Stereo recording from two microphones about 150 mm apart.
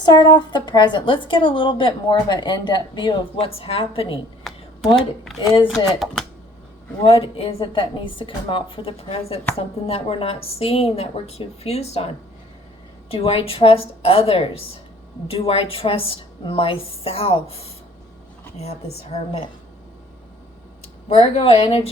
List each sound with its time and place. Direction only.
0.0 s a woman's voice: 30° left (ahead or behind)
4.9 s speech: centre (ahead or behind)
5.8 s speech: 30° left (ahead or behind)
7.0 s a woman's voice: 40° left (ahead or behind)
13.1 s a woman's voice: 40° left (ahead or behind)
21.1 s speech: 45° left (ahead or behind)